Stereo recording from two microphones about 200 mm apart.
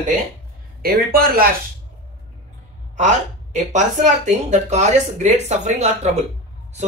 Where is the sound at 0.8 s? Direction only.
50° right (ahead or behind).